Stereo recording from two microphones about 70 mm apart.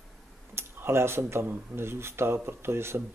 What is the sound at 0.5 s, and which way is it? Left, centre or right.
Speech, right.